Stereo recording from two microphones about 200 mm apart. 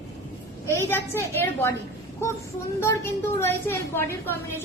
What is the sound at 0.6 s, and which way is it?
A woman's voice, 10° left (ahead or behind).